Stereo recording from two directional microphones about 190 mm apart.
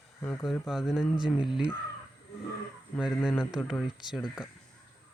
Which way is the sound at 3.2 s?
Centre (ahead or behind).